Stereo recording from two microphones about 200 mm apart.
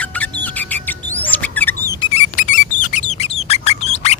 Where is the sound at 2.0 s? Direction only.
30° left (ahead or behind).